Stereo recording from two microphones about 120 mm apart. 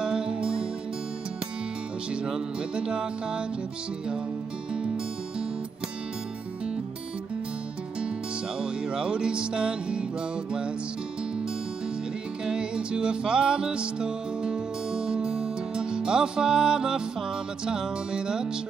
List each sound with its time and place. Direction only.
0.0 s music: 5° right (ahead or behind)
2.2 s music: 5° right (ahead or behind)
8.5 s music: 5° right (ahead or behind)
12.4 s music: 5° right (ahead or behind)